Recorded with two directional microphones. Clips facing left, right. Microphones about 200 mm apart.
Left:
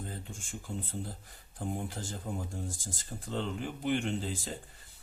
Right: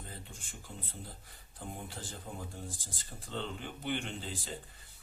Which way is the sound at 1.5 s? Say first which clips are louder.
Left 7 dB; 45° left (ahead or behind).